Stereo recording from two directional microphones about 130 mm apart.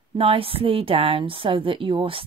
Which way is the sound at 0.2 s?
45° right (ahead or behind).